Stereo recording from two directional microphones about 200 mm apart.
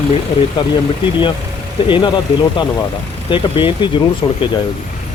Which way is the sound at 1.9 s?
25° left (ahead or behind).